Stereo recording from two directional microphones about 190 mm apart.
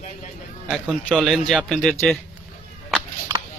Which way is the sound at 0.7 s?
Centre (ahead or behind).